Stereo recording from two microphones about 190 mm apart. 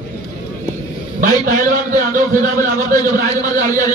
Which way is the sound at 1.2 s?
45° right (ahead or behind).